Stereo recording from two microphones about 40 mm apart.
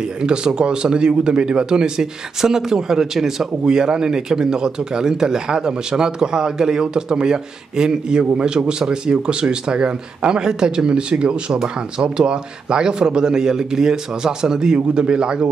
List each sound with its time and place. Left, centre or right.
0.2 s a man's voice: right